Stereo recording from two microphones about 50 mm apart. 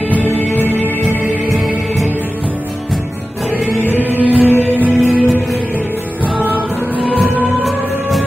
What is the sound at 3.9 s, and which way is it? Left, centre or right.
Music, right.